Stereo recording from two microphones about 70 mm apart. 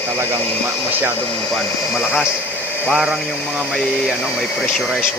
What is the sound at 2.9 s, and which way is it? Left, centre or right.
Speech, centre.